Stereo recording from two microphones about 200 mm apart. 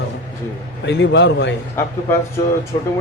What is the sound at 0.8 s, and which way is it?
Speech, 60° left (ahead or behind).